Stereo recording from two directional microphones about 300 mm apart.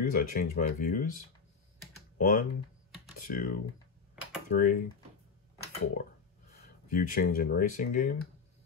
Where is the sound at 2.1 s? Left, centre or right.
Left.